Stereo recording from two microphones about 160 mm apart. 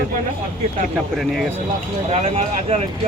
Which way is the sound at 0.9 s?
Centre (ahead or behind).